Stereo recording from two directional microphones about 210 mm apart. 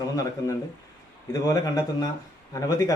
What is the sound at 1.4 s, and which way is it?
A man's voice, 15° left (ahead or behind).